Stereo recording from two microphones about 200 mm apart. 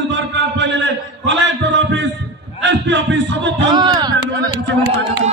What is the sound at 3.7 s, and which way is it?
Speech, 20° right (ahead or behind).